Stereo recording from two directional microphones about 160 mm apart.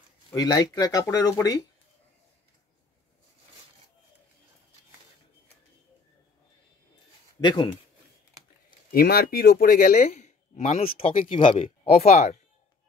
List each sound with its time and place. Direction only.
0.3 s speech: 25° left (ahead or behind)
7.3 s speech: 30° left (ahead or behind)
8.6 s speech: 75° left (ahead or behind); by 12.4 s 45° left (ahead or behind)